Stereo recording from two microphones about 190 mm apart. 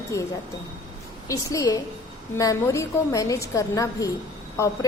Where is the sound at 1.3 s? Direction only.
15° left (ahead or behind).